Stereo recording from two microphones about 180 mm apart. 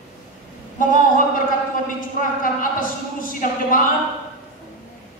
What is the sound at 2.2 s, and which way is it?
Speech, 50° left (ahead or behind).